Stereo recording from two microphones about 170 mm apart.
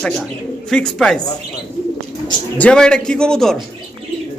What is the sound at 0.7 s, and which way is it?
Speech, 5° left (ahead or behind).